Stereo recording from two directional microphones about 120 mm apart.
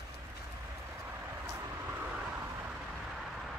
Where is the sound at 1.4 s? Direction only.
15° right (ahead or behind).